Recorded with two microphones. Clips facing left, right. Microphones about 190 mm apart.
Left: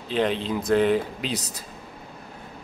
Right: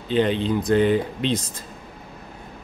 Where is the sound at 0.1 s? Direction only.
Centre (ahead or behind).